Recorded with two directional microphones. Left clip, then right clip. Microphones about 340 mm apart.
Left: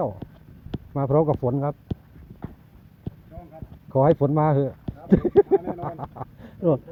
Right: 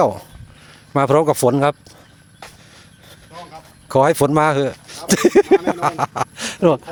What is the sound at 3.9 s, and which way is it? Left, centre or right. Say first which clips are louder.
A man's voice: right 6 dB; right.